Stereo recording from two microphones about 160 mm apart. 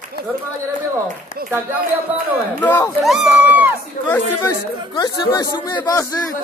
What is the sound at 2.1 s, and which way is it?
Speech, 10° right (ahead or behind).